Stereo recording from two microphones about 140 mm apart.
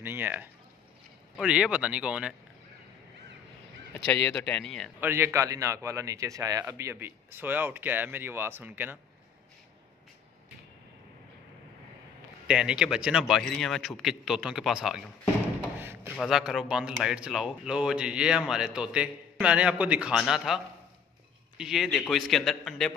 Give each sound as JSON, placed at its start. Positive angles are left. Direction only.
{"t": 0.0, "sound": "speech", "side_deg": -15}
{"t": 3.9, "sound": "speech", "side_deg": 10}
{"t": 5.0, "sound": "a man's voice", "side_deg": -15}
{"t": 12.4, "sound": "speech", "side_deg": -5}
{"t": 15.8, "sound": "a sound", "side_deg": -15}
{"t": 16.2, "sound": "speech", "side_deg": 0}